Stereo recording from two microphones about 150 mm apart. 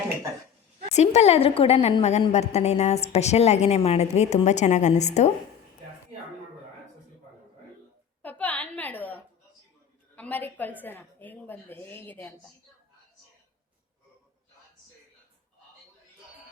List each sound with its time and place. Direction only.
0.9 s a woman's voice: 45° left (ahead or behind)
8.2 s a sound: 10° left (ahead or behind)
10.2 s a woman's voice: 10° left (ahead or behind)